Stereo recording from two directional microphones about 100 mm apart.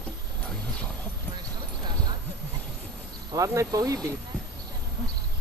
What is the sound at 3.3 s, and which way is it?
Speech, 30° right (ahead or behind).